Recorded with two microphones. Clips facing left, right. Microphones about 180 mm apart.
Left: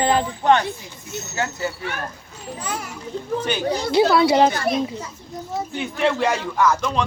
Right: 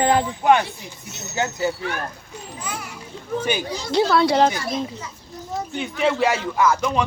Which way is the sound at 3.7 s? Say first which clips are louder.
Left 6 dB; 60° left (ahead or behind).